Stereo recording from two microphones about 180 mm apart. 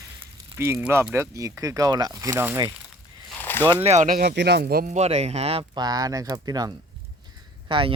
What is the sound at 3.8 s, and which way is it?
Speech, 40° right (ahead or behind).